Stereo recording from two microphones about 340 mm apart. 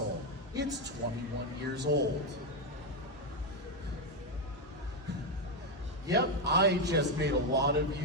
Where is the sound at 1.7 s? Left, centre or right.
Right.